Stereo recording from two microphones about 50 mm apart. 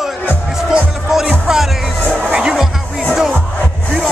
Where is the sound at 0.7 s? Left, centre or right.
Centre.